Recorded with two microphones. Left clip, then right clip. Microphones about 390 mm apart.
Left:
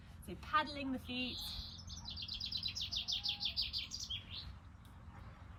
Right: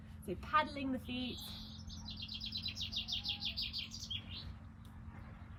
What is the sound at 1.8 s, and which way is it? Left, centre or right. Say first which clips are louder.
Chirp: even; left.